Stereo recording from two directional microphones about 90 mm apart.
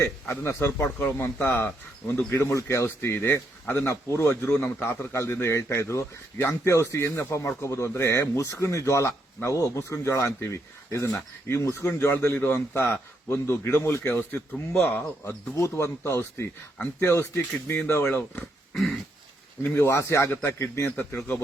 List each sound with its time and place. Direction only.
0.0 s a man's voice: 30° left (ahead or behind)
14.5 s a man's voice: 15° left (ahead or behind)
15.5 s a man's voice: 30° left (ahead or behind)
16.7 s speech: 15° left (ahead or behind)
17.1 s a man's voice: 30° left (ahead or behind)
18.7 s a sound: centre (ahead or behind)
19.6 s a man's voice: 25° left (ahead or behind)
20.9 s speech: 15° left (ahead or behind)